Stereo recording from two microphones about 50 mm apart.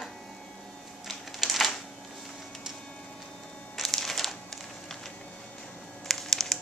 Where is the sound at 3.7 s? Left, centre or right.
Centre.